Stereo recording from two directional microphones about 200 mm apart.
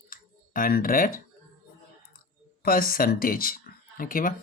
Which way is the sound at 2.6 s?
45° left (ahead or behind).